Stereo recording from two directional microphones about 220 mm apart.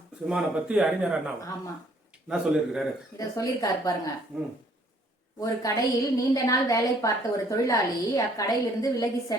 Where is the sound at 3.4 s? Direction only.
15° left (ahead or behind).